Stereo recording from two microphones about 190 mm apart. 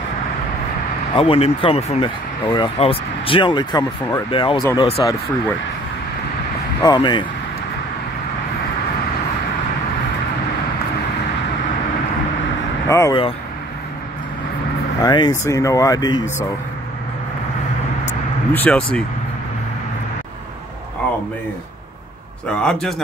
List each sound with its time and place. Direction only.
1.1 s speech: 30° left (ahead or behind)
6.8 s speech: 20° left (ahead or behind)
12.8 s speech: 15° left (ahead or behind)
15.0 s speech: 20° left (ahead or behind)
18.0 s vehicle: 10° left (ahead or behind)
22.5 s a man's voice: 5° left (ahead or behind)